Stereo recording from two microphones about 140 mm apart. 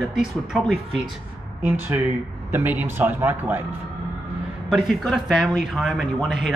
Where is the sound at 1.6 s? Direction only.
10° right (ahead or behind).